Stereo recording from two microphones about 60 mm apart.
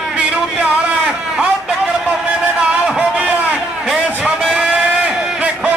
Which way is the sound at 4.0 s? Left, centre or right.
Centre.